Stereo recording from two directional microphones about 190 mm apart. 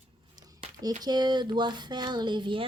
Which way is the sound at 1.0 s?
20° right (ahead or behind).